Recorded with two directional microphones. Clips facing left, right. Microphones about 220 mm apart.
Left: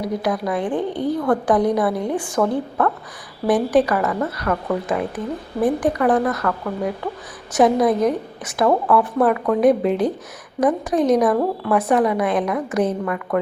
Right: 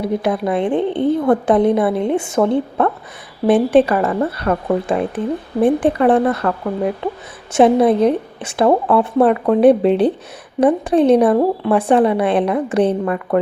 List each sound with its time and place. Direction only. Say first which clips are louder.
0.0 s a woman's voice: right 4 dB; 25° right (ahead or behind)